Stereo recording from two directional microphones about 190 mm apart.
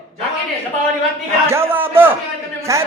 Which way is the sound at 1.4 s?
15° right (ahead or behind).